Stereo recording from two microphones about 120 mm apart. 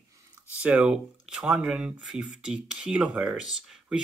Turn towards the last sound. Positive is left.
turn(degrees=-5)  # may be behind; listen again after turning